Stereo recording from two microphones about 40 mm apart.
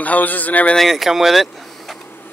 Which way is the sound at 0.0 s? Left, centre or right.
Left.